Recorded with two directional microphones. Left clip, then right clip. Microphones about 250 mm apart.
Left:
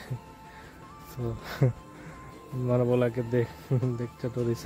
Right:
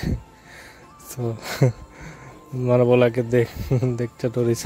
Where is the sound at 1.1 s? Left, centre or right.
Right.